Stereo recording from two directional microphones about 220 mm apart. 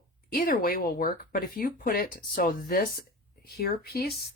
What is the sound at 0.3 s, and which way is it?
Speech, 40° left (ahead or behind).